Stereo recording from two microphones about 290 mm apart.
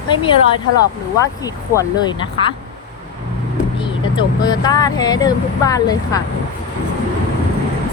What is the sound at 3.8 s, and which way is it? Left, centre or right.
Speech, centre.